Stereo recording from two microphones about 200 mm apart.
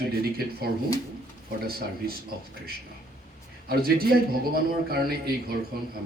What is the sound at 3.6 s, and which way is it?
A man's voice, 50° right (ahead or behind).